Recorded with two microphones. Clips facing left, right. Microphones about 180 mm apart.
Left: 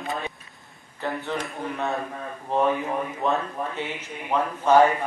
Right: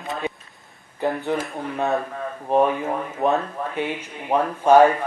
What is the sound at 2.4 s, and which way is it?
Speech, 20° right (ahead or behind).